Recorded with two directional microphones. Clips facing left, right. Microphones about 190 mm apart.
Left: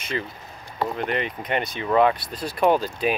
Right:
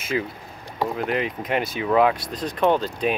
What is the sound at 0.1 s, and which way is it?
Speech, 5° right (ahead or behind).